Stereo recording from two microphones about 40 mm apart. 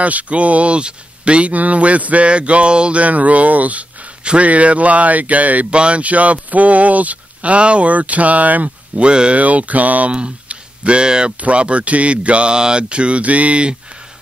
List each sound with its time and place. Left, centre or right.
0.0 s speech: right
8.9 s speech: right
9.4 s speech: right
10.1 s speech: right